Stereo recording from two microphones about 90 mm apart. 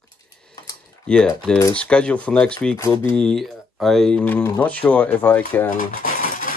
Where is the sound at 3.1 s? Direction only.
5° left (ahead or behind); by 5.6 s 20° left (ahead or behind).